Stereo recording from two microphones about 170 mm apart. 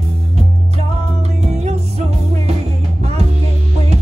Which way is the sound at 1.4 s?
40° right (ahead or behind).